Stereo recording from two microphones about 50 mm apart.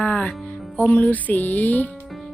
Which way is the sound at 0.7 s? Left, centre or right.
Left.